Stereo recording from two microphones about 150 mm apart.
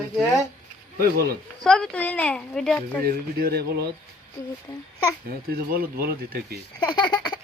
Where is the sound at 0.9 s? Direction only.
80° right.